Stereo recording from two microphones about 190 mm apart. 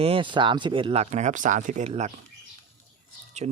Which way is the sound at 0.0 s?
30° right (ahead or behind).